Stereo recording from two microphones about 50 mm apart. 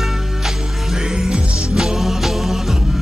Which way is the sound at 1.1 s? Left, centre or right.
Centre.